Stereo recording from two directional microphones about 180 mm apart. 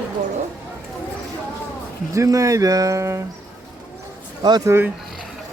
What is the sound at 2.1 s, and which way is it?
Speech, 15° right (ahead or behind).